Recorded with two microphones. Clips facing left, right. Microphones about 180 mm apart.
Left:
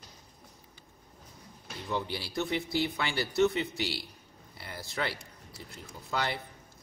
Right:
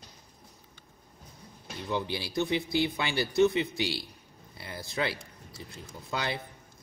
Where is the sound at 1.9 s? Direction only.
20° right (ahead or behind).